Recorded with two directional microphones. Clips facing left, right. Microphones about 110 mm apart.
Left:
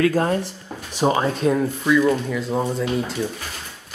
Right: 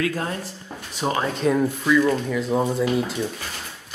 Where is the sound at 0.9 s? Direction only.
25° left (ahead or behind).